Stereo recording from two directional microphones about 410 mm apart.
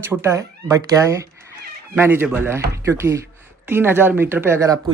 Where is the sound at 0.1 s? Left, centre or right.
Centre.